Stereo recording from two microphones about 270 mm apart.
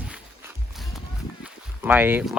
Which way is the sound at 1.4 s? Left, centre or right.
Centre.